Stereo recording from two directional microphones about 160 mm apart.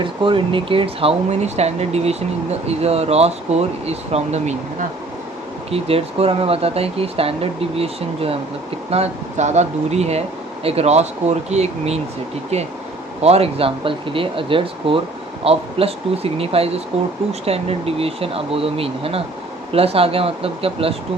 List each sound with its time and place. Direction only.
0.0 s speech: 30° right (ahead or behind)
13.2 s speech: 40° right (ahead or behind)